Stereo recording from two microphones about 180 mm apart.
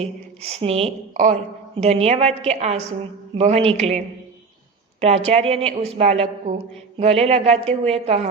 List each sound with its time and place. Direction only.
0.0 s a woman's voice: 35° right (ahead or behind)